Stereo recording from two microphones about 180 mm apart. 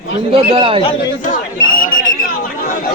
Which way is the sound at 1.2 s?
50° left (ahead or behind).